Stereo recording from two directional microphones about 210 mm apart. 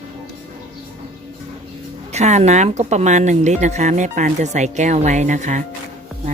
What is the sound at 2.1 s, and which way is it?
Speech, 30° right (ahead or behind).